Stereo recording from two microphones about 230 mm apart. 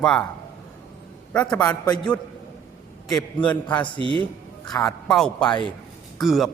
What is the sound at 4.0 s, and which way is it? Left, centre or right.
Speech, right.